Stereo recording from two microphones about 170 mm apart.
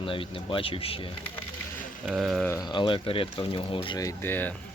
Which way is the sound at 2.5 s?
25° left (ahead or behind).